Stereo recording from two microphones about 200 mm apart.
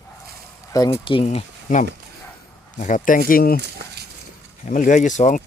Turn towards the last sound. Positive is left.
turn(degrees=40)  # may be behind; listen again after turning